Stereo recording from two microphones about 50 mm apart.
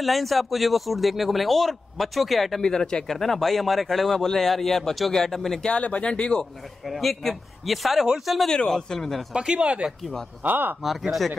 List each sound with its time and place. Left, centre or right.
0.0 s speech: centre
2.6 s speech: centre
5.7 s speech: left
6.9 s speech: centre
8.5 s speech: centre
9.3 s speech: centre
10.4 s speech: right
10.8 s speech: centre